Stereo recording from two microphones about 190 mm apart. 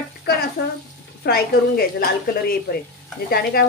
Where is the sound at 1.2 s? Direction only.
55° left (ahead or behind).